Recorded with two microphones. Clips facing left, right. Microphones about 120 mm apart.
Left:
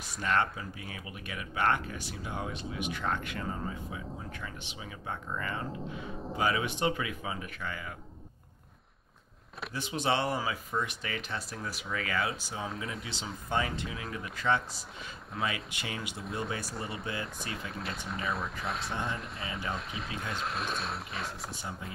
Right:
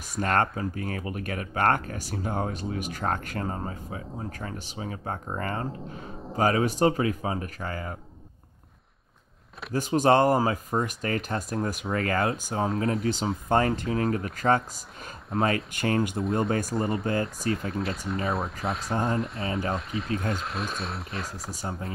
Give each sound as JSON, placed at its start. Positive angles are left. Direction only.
{"t": 0.2, "sound": "speech", "side_deg": -45}
{"t": 9.7, "sound": "speech", "side_deg": -45}
{"t": 16.7, "sound": "speech", "side_deg": 0}
{"t": 17.0, "sound": "speech", "side_deg": -45}
{"t": 17.6, "sound": "speech", "side_deg": 0}
{"t": 18.9, "sound": "speech", "side_deg": -40}
{"t": 19.1, "sound": "speech", "side_deg": 0}
{"t": 21.5, "sound": "speech", "side_deg": -40}